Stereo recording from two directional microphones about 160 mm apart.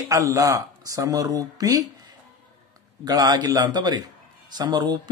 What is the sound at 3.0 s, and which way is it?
Speech, 25° right (ahead or behind).